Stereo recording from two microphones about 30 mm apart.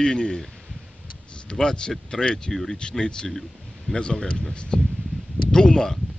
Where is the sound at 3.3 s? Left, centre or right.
Centre.